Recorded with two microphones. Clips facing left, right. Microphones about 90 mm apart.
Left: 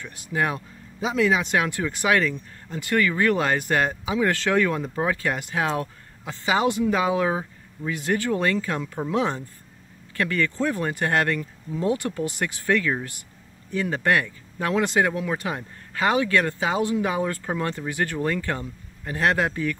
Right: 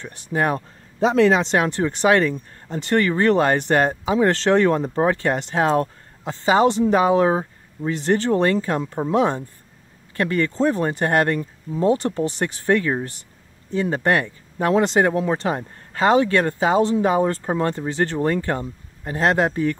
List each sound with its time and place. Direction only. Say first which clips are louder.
0.0 s speech: right 3 dB; 25° right (ahead or behind)
0.5 s speech: right 6 dB; 45° right (ahead or behind)
1.1 s speech: right 5 dB; 60° right (ahead or behind)
1.4 s speech: right 4 dB; 30° right (ahead or behind)